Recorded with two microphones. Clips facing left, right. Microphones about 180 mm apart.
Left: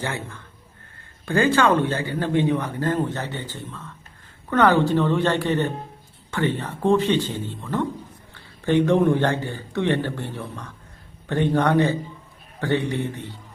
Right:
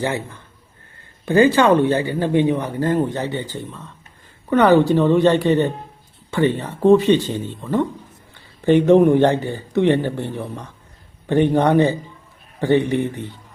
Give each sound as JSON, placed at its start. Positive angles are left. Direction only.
{"t": 0.0, "sound": "speech", "side_deg": -15}